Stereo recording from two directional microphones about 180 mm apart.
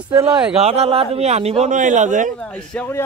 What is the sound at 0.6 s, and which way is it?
A man's voice, 35° right (ahead or behind).